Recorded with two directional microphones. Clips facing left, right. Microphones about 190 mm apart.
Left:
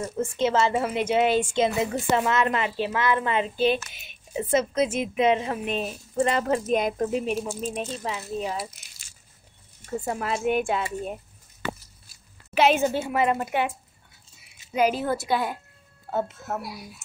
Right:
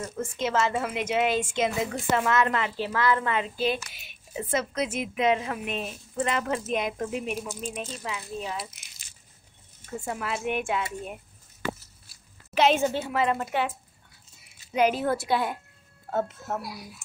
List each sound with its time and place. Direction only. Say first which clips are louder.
0.0 s a woman's voice: left 5 dB; 30° left (ahead or behind)
9.8 s a woman's voice: left 4 dB; 35° left (ahead or behind)
12.5 s a woman's voice: left 2 dB; 5° left (ahead or behind)
14.7 s a woman's voice: even; centre (ahead or behind)